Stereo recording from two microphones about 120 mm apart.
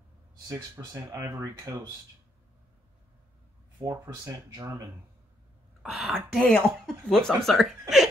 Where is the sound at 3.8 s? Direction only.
25° right (ahead or behind).